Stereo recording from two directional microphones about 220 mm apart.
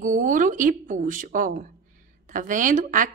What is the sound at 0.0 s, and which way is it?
A woman's voice, 35° right (ahead or behind).